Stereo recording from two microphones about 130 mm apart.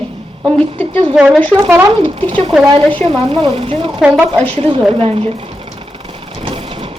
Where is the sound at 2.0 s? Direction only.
40° right (ahead or behind).